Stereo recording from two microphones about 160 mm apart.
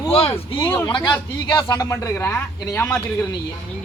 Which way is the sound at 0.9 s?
30° left (ahead or behind).